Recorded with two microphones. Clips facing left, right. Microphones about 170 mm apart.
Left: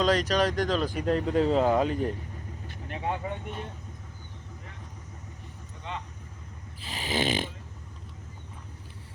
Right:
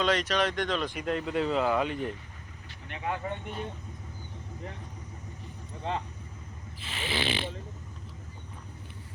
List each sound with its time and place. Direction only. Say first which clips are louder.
0.0 s speech: left 3 dB; 40° left (ahead or behind)
5.9 s speech: right 5 dB; 35° right (ahead or behind)
6.8 s snoring: left 4 dB; 40° left (ahead or behind)